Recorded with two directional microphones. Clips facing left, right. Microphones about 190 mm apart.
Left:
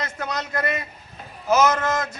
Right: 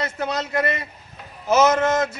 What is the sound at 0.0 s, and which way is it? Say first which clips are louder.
A man's voice: right 4 dB; 25° right (ahead or behind).